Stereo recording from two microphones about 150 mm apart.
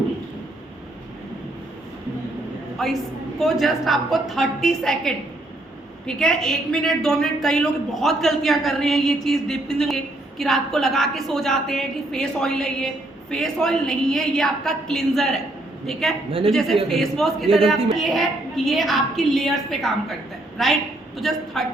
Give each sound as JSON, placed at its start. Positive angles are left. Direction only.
{"t": 2.8, "sound": "a woman's voice", "side_deg": 0}